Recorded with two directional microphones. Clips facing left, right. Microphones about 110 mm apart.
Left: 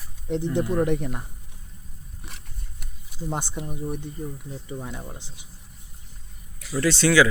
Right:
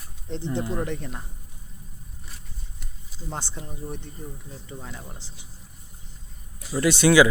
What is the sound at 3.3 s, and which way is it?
Speech, 15° left (ahead or behind).